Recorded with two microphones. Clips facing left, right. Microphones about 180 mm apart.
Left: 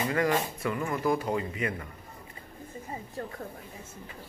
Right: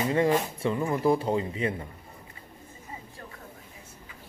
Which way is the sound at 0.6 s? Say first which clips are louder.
Right 3 dB; 25° right (ahead or behind).